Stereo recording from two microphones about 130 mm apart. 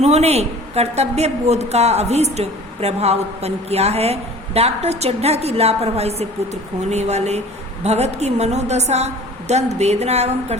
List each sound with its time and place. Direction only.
0.0 s a woman's voice: 55° right (ahead or behind)